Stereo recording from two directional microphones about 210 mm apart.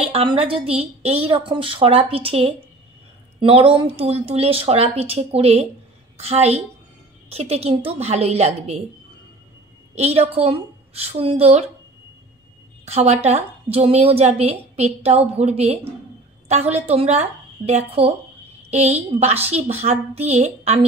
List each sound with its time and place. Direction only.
0.0 s a woman's voice: 25° right (ahead or behind)
9.9 s a woman's voice: 30° right (ahead or behind)
12.8 s a woman's voice: 30° right (ahead or behind)